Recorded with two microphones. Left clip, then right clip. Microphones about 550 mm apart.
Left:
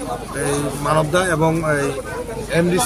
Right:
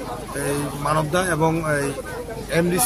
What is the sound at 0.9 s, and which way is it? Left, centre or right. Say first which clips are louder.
Speech: left 4 dB; right.